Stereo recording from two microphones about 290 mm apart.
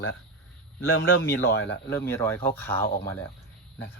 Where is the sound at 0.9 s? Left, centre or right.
Left.